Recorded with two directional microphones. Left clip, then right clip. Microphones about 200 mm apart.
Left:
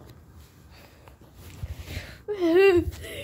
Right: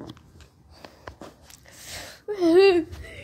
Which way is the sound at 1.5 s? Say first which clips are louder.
Left 1 dB; 25° right (ahead or behind).